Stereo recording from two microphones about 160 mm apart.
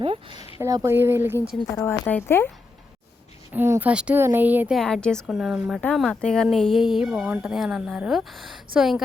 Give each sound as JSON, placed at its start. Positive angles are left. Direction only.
{"t": 0.0, "sound": "speech", "side_deg": -35}
{"t": 0.6, "sound": "speech", "side_deg": -20}
{"t": 1.7, "sound": "speech", "side_deg": 10}
{"t": 3.5, "sound": "speech", "side_deg": -10}
{"t": 4.8, "sound": "speech", "side_deg": 5}